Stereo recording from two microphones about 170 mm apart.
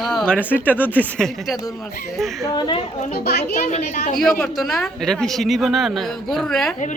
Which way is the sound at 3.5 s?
45° left (ahead or behind).